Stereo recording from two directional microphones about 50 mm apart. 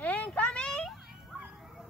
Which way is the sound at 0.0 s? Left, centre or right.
Left.